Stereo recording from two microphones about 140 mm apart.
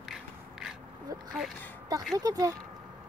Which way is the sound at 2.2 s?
25° right (ahead or behind).